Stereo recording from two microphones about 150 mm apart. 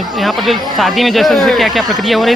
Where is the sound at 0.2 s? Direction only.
Centre (ahead or behind).